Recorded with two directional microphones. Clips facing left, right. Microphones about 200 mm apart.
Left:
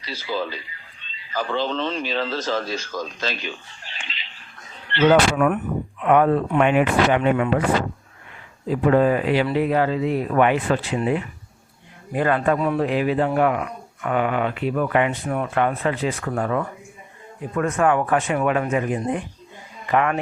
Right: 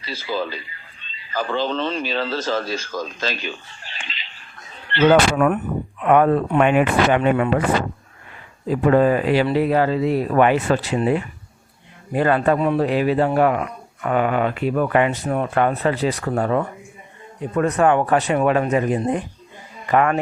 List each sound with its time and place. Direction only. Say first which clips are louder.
0.2 s speech: right 1 dB; 45° right (ahead or behind)
4.9 s speech: right 1 dB; 45° right (ahead or behind)
8.6 s speech: right 2 dB; 45° right (ahead or behind); by 12.8 s 25° right (ahead or behind)
12.8 s speech: right 2 dB; 35° right (ahead or behind)